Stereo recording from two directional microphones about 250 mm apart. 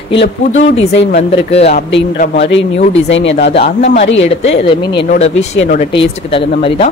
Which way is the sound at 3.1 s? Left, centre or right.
Left.